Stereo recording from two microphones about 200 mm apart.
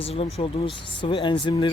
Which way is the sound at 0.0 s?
30° left (ahead or behind).